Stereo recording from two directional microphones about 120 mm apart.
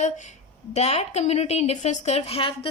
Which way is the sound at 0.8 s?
60° left (ahead or behind).